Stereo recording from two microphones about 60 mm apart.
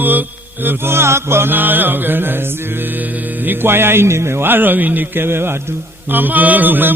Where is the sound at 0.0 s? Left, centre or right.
Right.